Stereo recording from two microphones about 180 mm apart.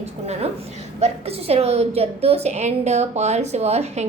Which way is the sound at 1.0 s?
35° right (ahead or behind).